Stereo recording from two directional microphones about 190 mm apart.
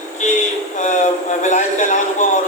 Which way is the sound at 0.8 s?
40° left (ahead or behind).